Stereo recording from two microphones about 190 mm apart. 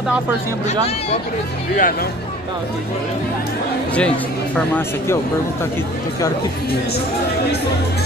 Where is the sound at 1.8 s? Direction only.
50° left (ahead or behind).